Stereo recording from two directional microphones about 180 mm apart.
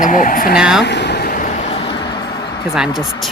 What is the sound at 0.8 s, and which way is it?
Vehicle, 70° left (ahead or behind).